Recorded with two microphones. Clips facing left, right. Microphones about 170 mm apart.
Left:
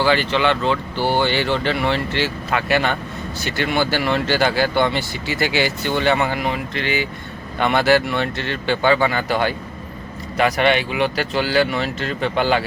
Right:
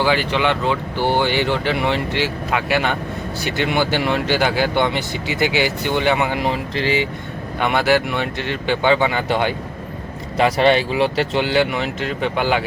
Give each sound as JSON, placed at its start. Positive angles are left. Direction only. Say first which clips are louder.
{"t": 0.0, "sound": "speech", "louder": "even", "side_deg": -10}
{"t": 6.4, "sound": "speech", "louder": "right 2 dB", "side_deg": -30}
{"t": 7.6, "sound": "speech", "louder": "left 1 dB", "side_deg": -10}